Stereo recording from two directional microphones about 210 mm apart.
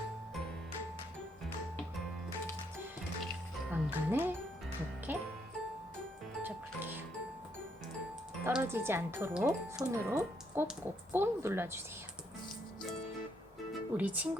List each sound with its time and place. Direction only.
3.7 s speech: 10° right (ahead or behind)
6.4 s music: 10° right (ahead or behind)
8.4 s speech: 10° right (ahead or behind)
13.9 s speech: 10° right (ahead or behind)